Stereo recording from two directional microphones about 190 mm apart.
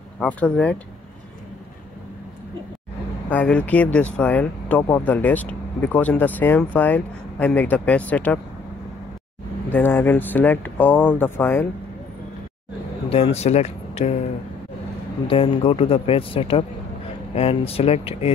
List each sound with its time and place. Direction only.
0.2 s speech: 5° left (ahead or behind)
3.3 s speech: 5° left (ahead or behind)
9.7 s speech: 10° left (ahead or behind)
13.1 s speech: 30° left (ahead or behind)
15.2 s speech: 30° left (ahead or behind)